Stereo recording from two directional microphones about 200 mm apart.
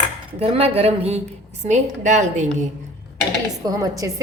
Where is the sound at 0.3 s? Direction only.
30° right (ahead or behind).